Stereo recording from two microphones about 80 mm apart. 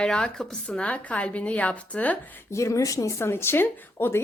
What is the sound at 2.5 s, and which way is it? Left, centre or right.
Speech, left.